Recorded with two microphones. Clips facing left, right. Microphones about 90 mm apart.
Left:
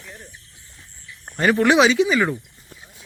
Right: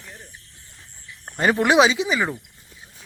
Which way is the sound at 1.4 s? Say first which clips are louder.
Left 1 dB; 25° right (ahead or behind).